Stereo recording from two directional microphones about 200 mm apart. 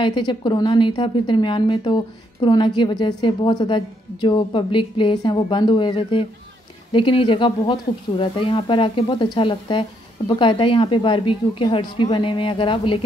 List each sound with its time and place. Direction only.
0.0 s speech: 25° left (ahead or behind)